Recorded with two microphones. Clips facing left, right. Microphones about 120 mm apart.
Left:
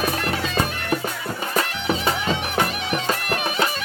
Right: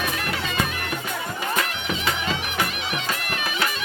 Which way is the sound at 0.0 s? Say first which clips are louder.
Left 4 dB; 35° left (ahead or behind).